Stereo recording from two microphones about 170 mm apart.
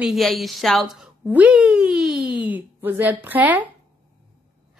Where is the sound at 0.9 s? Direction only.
5° right (ahead or behind).